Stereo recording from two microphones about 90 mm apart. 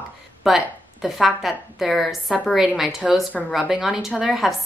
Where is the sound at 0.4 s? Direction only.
5° right (ahead or behind).